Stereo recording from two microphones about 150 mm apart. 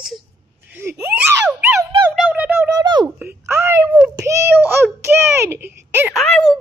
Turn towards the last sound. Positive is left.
turn(degrees=5)  # may be behind; listen again after turning